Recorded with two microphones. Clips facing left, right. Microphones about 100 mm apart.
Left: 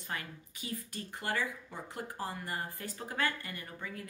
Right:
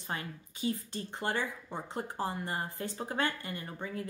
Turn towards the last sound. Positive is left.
turn(degrees=-30)  # may be behind; listen again after turning